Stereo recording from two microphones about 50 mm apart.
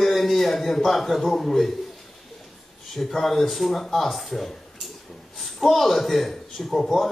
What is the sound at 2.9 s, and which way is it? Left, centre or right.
A man's voice, centre.